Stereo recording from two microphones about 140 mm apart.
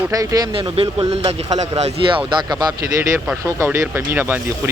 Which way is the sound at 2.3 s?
35° right (ahead or behind).